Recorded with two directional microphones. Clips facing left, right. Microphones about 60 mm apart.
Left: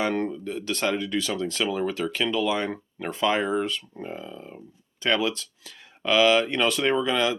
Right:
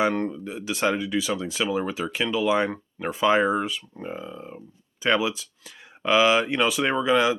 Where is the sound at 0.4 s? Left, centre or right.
Centre.